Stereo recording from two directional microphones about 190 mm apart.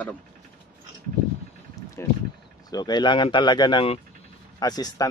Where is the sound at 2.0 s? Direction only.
15° left (ahead or behind).